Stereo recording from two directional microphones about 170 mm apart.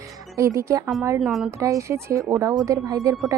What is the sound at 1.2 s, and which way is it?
Speech, centre (ahead or behind).